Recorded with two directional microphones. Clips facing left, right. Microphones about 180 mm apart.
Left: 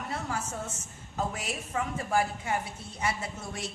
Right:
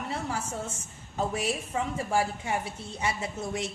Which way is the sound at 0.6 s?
30° right (ahead or behind).